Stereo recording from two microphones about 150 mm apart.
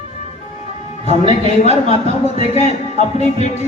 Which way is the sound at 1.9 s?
45° left (ahead or behind).